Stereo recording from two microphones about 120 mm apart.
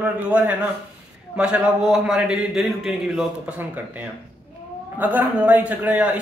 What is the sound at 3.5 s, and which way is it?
Speech, 15° right (ahead or behind).